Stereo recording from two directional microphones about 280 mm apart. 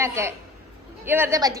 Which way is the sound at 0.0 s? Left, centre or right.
Centre.